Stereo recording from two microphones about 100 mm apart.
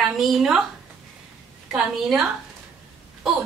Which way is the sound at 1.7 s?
5° right (ahead or behind).